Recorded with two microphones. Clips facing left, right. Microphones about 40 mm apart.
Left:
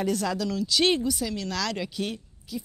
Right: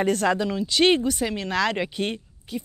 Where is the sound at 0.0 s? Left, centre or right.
Right.